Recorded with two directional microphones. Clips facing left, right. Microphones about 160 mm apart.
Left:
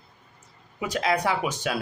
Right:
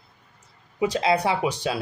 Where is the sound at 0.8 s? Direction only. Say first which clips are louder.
Right 3 dB; 35° right (ahead or behind).